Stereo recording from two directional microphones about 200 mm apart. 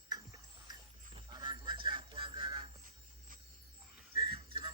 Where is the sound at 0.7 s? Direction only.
20° right (ahead or behind).